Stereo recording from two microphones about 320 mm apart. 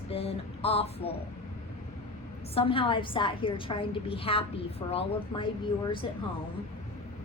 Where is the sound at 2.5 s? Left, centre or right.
Centre.